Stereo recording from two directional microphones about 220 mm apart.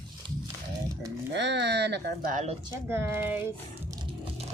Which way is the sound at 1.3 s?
50° right (ahead or behind).